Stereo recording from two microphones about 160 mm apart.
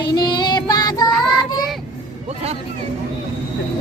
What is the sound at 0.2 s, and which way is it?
Child singing, 25° left (ahead or behind).